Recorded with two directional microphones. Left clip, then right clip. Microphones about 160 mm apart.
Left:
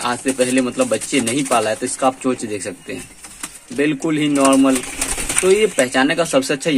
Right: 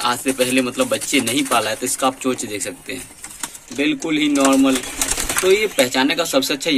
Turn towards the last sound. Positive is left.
turn(degrees=45)  # may be behind; listen again after turning